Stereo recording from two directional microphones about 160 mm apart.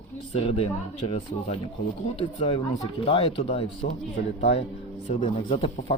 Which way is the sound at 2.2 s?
30° left (ahead or behind).